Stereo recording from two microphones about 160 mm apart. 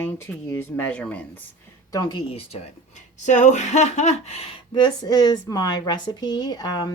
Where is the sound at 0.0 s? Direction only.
10° left (ahead or behind).